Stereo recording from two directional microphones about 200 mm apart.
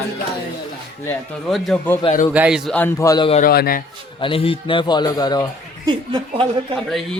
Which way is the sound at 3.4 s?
50° left (ahead or behind).